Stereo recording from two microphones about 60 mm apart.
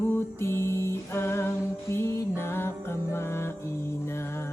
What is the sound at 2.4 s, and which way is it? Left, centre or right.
Music, left.